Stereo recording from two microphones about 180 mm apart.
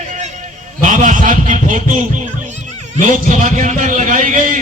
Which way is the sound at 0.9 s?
45° right (ahead or behind).